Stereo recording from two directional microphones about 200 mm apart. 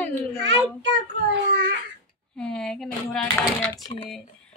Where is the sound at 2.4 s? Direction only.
5° left (ahead or behind).